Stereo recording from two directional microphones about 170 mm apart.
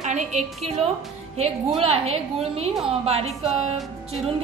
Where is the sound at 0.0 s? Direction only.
45° right (ahead or behind).